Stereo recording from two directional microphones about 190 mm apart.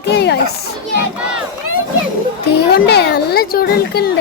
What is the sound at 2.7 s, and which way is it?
A child's voice, 55° left (ahead or behind).